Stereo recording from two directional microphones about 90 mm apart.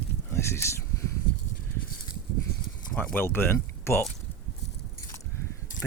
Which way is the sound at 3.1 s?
25° left (ahead or behind).